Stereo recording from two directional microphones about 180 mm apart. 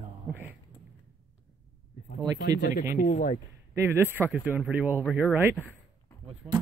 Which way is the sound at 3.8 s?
15° right (ahead or behind).